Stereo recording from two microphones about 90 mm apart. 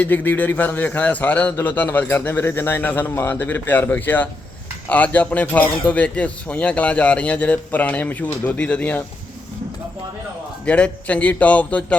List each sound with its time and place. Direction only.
0.0 s speech: 20° left (ahead or behind)
10.7 s speech: 15° left (ahead or behind)